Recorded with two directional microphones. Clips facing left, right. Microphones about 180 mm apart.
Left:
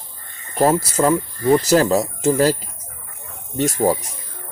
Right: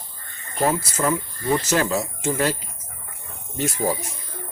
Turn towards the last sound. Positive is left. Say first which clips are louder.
# left 6 dB
turn(degrees=55)  # may be behind; listen again after turning